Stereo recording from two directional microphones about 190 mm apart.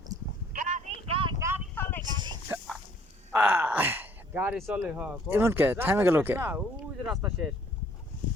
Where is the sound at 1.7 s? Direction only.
10° left (ahead or behind).